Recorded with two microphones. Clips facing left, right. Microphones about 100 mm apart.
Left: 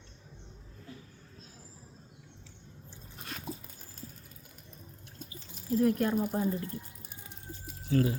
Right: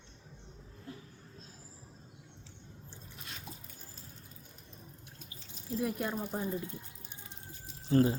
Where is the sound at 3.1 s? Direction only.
50° left (ahead or behind).